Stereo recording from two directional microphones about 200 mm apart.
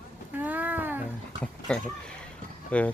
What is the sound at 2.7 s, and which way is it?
Speech, 5° left (ahead or behind).